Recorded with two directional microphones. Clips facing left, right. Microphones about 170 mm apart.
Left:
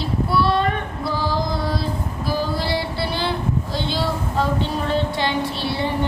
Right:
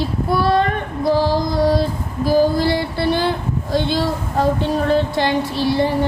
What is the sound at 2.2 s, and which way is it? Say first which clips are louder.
A woman's voice: right 9 dB; 45° right (ahead or behind).